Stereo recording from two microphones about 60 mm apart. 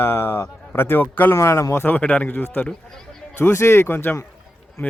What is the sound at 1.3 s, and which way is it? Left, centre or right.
Speech, left.